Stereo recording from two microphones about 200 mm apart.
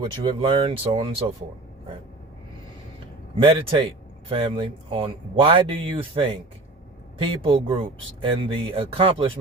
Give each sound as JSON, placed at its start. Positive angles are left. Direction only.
{"t": 0.0, "sound": "speech", "side_deg": -25}
{"t": 3.3, "sound": "speech", "side_deg": -25}